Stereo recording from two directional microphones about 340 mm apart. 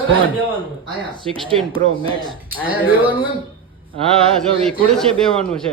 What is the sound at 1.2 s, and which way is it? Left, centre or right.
Speech, centre.